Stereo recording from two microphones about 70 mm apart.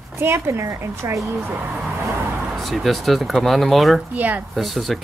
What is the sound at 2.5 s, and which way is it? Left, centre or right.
Speech, centre.